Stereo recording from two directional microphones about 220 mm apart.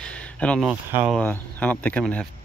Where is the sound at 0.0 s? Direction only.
5° left (ahead or behind).